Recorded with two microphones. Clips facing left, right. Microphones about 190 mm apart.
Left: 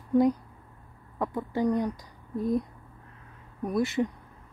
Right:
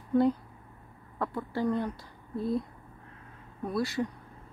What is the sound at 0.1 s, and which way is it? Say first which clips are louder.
Speech: left 2 dB; 15° left (ahead or behind).